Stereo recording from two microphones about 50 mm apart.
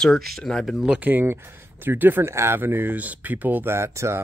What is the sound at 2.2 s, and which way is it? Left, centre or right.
Speech, right.